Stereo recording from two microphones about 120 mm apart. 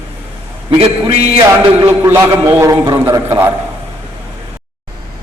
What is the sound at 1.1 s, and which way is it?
Speech, 55° right (ahead or behind).